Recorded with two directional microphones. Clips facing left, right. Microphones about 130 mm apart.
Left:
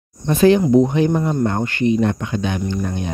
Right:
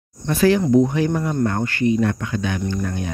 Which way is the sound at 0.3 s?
20° left (ahead or behind).